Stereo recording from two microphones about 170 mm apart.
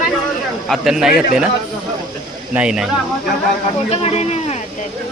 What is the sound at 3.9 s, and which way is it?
Speech, 35° left (ahead or behind).